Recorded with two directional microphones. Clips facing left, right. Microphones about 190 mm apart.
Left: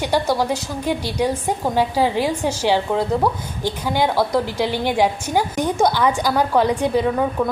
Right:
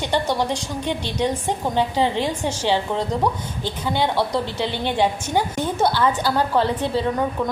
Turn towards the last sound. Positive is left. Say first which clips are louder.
# left 3 dB
turn(degrees=10)  # may be behind; listen again after turning